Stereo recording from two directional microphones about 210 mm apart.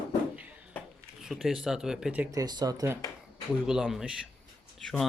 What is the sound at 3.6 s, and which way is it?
Speech, centre (ahead or behind).